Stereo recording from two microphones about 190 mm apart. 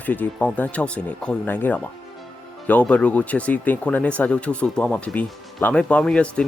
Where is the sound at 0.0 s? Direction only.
10° left (ahead or behind).